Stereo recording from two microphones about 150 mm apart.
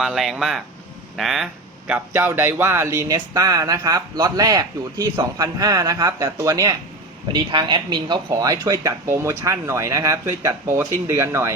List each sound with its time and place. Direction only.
0.0 s speech: centre (ahead or behind)
1.9 s speech: 15° right (ahead or behind)